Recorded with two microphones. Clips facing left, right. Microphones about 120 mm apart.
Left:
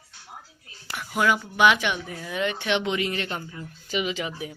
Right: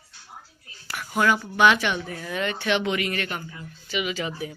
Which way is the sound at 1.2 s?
10° left (ahead or behind).